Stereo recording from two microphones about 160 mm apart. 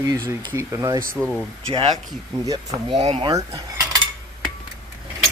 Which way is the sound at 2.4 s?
30° right (ahead or behind).